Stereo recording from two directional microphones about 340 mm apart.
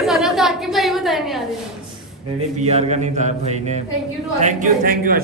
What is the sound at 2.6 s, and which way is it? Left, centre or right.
A man's voice, centre.